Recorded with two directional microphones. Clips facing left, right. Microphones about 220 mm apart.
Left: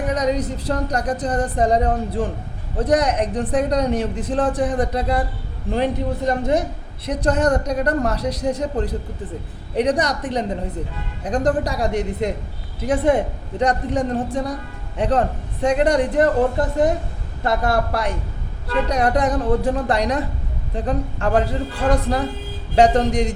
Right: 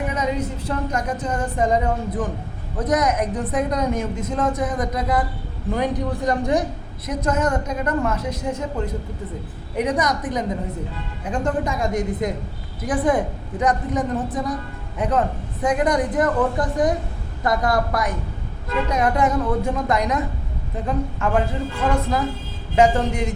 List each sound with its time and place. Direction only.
0.1 s a woman's voice: 35° left (ahead or behind)